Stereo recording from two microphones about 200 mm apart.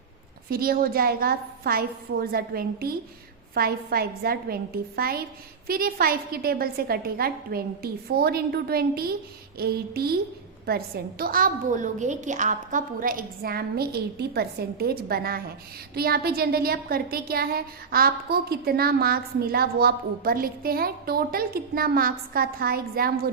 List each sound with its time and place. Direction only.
0.5 s a woman's voice: 45° right (ahead or behind)